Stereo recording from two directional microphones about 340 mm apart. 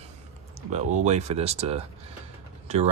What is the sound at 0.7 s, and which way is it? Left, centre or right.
Speech, centre.